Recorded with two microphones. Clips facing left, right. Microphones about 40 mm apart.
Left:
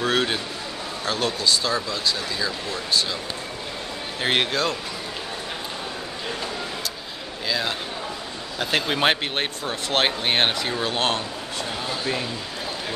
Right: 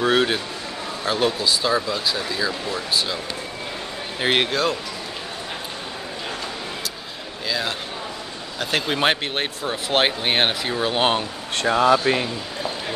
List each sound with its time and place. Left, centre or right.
0.0 s speech: centre
4.2 s speech: centre
7.4 s speech: centre
11.5 s speech: right